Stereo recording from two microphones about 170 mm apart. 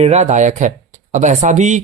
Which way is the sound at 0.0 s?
40° right (ahead or behind).